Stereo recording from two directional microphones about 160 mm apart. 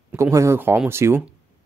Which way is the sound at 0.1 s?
20° right (ahead or behind).